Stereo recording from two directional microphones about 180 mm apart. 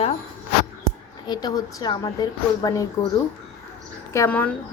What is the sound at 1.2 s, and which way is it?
A woman's voice, 25° left (ahead or behind).